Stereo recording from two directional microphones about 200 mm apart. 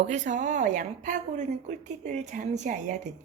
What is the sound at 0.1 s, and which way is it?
A woman's voice, 40° right (ahead or behind).